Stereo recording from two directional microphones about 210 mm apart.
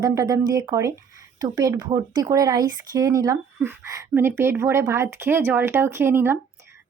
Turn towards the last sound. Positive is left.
turn(degrees=-10)  # may be behind; listen again after turning